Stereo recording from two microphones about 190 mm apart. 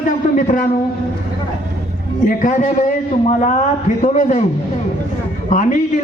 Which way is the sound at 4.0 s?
40° left (ahead or behind).